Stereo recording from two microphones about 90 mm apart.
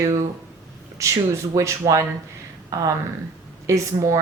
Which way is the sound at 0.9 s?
35° right (ahead or behind).